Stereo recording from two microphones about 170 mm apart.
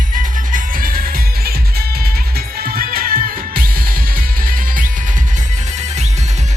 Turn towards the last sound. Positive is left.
turn(degrees=-55)  # may be behind; listen again after turning